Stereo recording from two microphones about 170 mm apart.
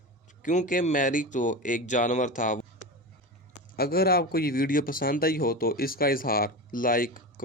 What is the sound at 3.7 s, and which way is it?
A man's voice, 65° left (ahead or behind).